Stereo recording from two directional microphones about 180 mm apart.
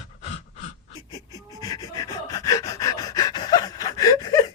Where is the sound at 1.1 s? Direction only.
20° left (ahead or behind).